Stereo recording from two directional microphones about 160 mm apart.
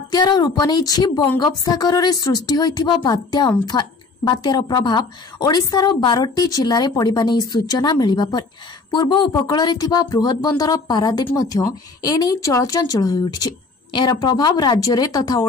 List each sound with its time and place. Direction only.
0.1 s a woman's voice: 25° left (ahead or behind)